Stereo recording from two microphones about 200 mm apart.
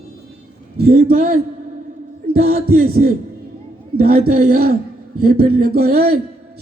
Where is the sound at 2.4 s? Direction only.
50° right (ahead or behind).